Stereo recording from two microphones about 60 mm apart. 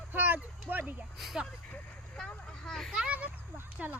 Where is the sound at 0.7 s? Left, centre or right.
Right.